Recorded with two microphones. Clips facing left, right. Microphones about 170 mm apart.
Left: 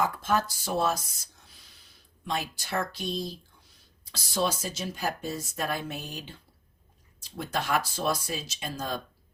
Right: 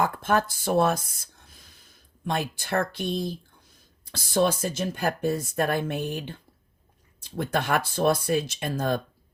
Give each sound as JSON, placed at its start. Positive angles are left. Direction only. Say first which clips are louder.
{"t": 0.0, "sound": "speech", "louder": "right 3 dB", "side_deg": -55}